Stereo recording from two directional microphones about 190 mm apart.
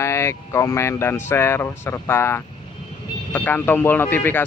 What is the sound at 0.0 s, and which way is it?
Speech, 15° left (ahead or behind).